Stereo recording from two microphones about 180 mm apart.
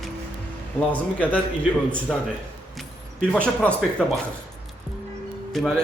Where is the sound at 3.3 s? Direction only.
5° left (ahead or behind).